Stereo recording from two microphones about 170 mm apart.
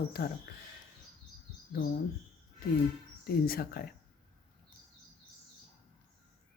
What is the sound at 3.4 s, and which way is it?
Speech, 65° left (ahead or behind).